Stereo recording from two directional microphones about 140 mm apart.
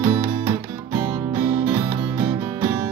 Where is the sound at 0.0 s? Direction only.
40° right (ahead or behind).